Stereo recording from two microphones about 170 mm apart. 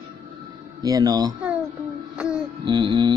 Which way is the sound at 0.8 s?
20° right (ahead or behind).